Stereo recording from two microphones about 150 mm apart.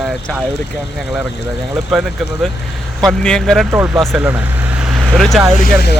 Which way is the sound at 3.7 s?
15° right (ahead or behind).